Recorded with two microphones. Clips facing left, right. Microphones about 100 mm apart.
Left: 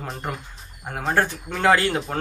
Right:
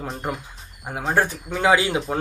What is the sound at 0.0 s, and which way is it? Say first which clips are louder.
A man's voice: right 2 dB; centre (ahead or behind).